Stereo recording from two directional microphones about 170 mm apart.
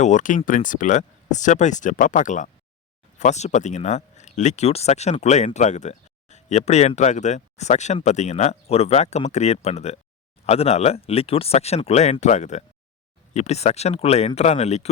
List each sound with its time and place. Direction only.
0.0 s speech: 45° left (ahead or behind)